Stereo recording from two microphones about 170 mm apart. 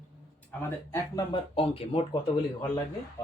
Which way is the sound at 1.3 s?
35° left (ahead or behind).